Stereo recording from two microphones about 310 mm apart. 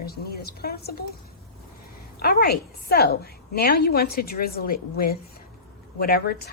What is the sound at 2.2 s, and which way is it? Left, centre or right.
A woman's voice, left.